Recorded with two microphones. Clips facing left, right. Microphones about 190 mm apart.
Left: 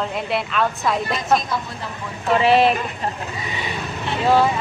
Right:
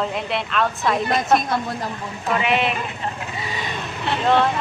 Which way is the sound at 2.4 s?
35° left (ahead or behind).